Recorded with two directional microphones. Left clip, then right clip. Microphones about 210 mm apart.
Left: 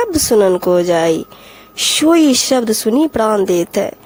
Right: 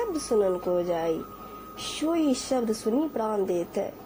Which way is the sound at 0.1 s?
40° left (ahead or behind).